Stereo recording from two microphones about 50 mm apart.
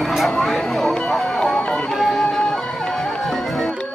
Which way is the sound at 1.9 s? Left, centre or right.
Centre.